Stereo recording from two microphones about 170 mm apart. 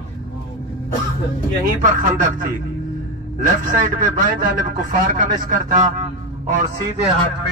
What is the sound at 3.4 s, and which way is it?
Speech, 50° right (ahead or behind).